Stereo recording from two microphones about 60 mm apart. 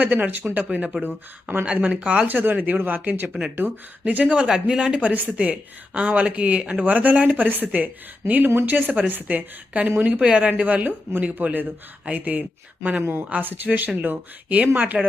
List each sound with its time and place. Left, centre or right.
0.0 s speech: right
1.6 s speech: right
2.2 s speech: right
3.6 s speech: right
4.0 s speech: right
4.4 s speech: centre; by 14.6 s right
14.9 s speech: centre